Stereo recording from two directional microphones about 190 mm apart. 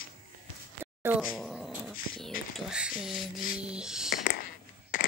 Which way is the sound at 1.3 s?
Centre (ahead or behind).